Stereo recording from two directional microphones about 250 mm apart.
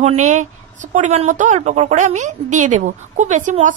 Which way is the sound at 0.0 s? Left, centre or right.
Right.